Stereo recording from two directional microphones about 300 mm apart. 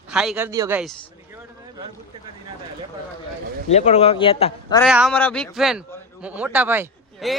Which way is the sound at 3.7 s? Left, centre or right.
Left.